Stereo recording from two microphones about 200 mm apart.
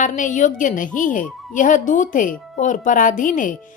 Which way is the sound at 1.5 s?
40° left (ahead or behind).